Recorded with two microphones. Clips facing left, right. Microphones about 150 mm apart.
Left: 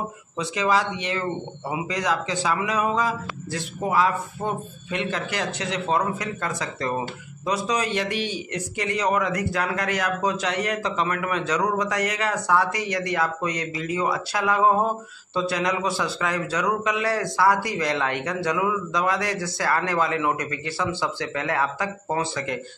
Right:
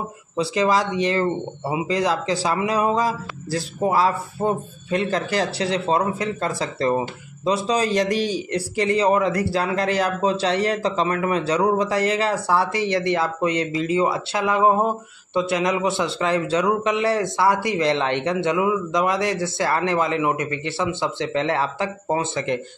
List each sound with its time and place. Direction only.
0.4 s a man's voice: 35° right (ahead or behind)